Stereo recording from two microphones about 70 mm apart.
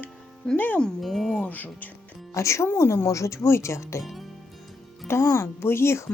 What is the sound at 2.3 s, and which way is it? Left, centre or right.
Speech, left.